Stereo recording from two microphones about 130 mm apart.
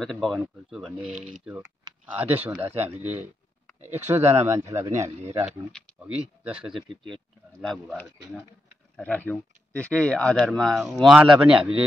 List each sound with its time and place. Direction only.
0.0 s speech: centre (ahead or behind)
1.1 s speech: 65° right (ahead or behind)
1.4 s speech: 10° right (ahead or behind)
3.0 s speech: 60° right (ahead or behind)
4.1 s speech: 20° right (ahead or behind)
6.4 s speech: 5° right (ahead or behind)
8.9 s speech: 10° left (ahead or behind); by 11.7 s 5° right (ahead or behind)